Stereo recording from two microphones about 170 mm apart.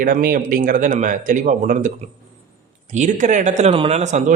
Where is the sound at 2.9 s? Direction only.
45° right (ahead or behind).